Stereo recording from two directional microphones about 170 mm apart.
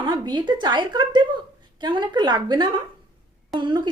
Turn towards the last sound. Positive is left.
turn(degrees=-25)  # may be behind; listen again after turning